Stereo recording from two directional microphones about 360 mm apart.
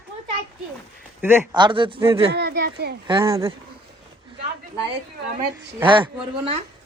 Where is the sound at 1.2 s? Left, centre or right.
Centre.